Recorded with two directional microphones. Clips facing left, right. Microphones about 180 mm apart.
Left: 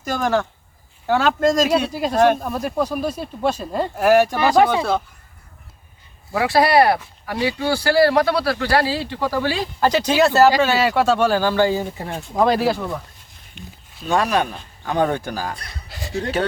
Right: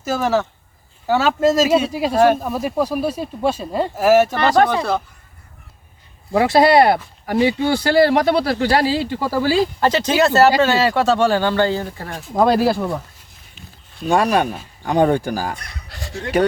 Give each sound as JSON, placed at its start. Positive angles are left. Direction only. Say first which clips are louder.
{"t": 0.0, "sound": "speech", "louder": "right 2 dB", "side_deg": -5}
{"t": 6.3, "sound": "speech", "louder": "right 3 dB", "side_deg": -25}
{"t": 9.0, "sound": "speech", "louder": "right 2 dB", "side_deg": -10}
{"t": 9.8, "sound": "speech", "louder": "left 4 dB", "side_deg": 0}
{"t": 12.5, "sound": "speech", "louder": "right 3 dB", "side_deg": -5}
{"t": 15.9, "sound": "speech", "louder": "left 5 dB", "side_deg": 0}